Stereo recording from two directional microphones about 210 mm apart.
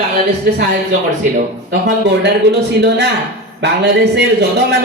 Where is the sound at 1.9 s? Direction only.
55° right (ahead or behind).